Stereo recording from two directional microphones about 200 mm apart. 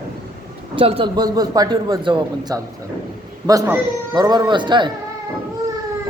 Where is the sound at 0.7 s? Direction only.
30° right (ahead or behind).